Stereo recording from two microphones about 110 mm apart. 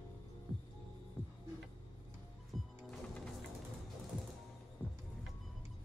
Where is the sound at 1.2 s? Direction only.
15° left (ahead or behind).